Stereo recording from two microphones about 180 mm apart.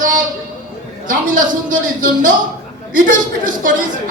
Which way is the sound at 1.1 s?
45° right (ahead or behind).